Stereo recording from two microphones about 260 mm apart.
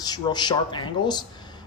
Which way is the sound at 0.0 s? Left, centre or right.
Centre.